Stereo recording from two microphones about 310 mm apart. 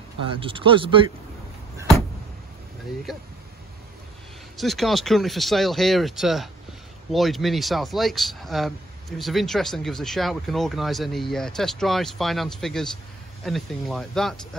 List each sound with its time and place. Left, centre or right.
0.2 s speech: centre
4.6 s speech: centre